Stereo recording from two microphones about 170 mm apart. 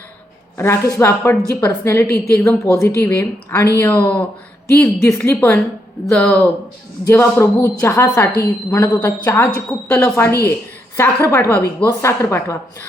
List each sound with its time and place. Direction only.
0.5 s a woman's voice: 15° left (ahead or behind)